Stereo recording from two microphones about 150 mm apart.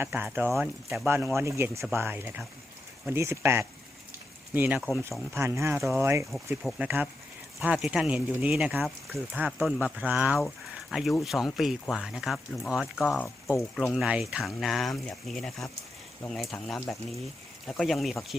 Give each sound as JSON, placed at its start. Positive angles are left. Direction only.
{"t": 0.0, "sound": "speech", "side_deg": -15}
{"t": 0.6, "sound": "speech", "side_deg": -5}
{"t": 1.0, "sound": "speech", "side_deg": -15}
{"t": 6.6, "sound": "speech", "side_deg": 0}
{"t": 6.8, "sound": "speech", "side_deg": -10}